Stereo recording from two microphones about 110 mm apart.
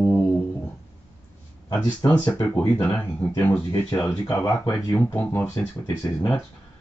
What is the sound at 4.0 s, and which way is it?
Speech, 30° left (ahead or behind).